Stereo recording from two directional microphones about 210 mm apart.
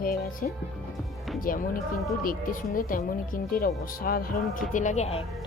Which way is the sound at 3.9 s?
45° left (ahead or behind).